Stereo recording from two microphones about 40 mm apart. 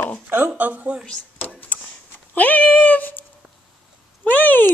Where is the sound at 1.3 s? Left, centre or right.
Left.